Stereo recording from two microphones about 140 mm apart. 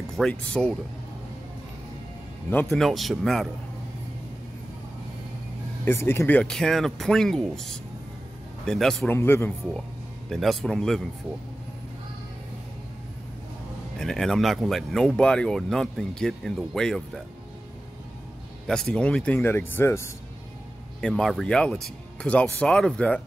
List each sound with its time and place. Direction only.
0.1 s speech: 5° left (ahead or behind)
2.7 s speech: centre (ahead or behind)
5.9 s speech: 20° left (ahead or behind)
9.1 s speech: 15° left (ahead or behind)
10.3 s speech: centre (ahead or behind)
13.9 s speech: 5° left (ahead or behind)
18.7 s speech: 5° left (ahead or behind)
21.0 s speech: 5° left (ahead or behind)